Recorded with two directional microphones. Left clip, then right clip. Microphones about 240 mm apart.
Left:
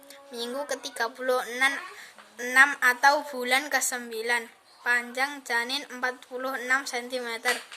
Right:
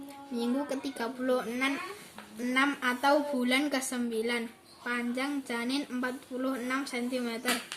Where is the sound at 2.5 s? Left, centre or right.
Left.